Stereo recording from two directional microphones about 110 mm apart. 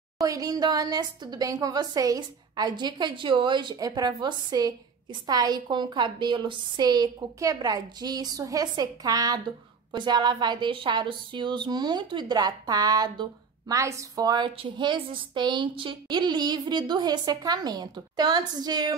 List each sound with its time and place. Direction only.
0.2 s a woman's voice: 35° right (ahead or behind)